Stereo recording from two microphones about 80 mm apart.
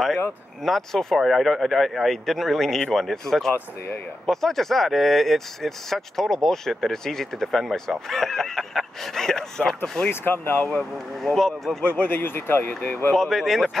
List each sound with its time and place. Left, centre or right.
0.7 s speech: centre
10.0 s speech: left
10.7 s speech: centre
11.8 s speech: left
13.1 s speech: centre